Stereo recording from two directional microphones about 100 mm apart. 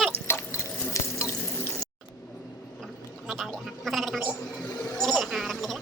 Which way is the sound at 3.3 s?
Centre (ahead or behind).